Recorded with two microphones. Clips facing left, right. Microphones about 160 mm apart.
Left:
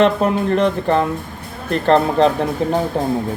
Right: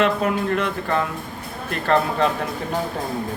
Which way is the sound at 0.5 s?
30° left (ahead or behind).